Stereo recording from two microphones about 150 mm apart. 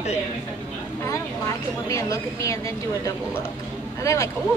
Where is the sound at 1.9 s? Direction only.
20° left (ahead or behind).